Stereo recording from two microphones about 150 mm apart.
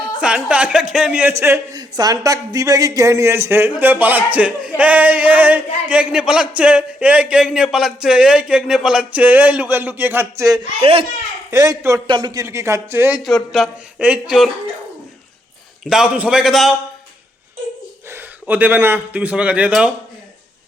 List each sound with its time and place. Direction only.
0.0 s speech: 5° right (ahead or behind)
1.3 s speech: 20° right (ahead or behind)
13.2 s speech: centre (ahead or behind)
15.8 s speech: 5° right (ahead or behind)
18.1 s a man's voice: 10° right (ahead or behind)